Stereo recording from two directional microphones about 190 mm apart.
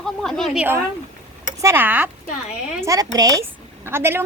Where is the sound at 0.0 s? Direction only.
Centre (ahead or behind).